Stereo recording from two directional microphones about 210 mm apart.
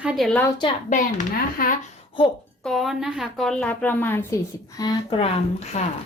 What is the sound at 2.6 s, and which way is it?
A woman's voice, centre (ahead or behind).